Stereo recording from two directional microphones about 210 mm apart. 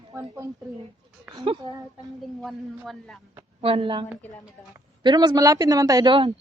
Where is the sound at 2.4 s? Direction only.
Centre (ahead or behind).